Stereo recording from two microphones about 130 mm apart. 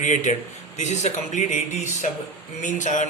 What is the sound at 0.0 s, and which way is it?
A man's voice, 70° left (ahead or behind).